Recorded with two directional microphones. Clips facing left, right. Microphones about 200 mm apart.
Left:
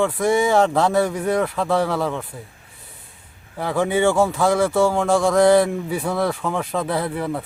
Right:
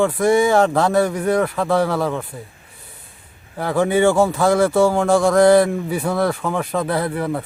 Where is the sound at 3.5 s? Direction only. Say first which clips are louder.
Right 3 dB; centre (ahead or behind).